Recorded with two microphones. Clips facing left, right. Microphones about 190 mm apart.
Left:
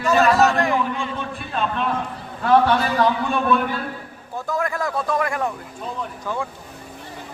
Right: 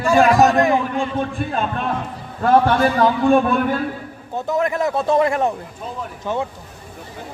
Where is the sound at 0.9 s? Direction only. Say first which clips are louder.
Right 6 dB; 45° right (ahead or behind).